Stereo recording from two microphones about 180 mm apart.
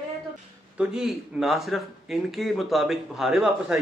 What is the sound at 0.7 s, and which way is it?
Speech, centre (ahead or behind).